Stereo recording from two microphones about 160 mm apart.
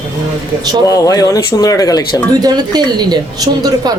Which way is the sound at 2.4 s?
25° right (ahead or behind).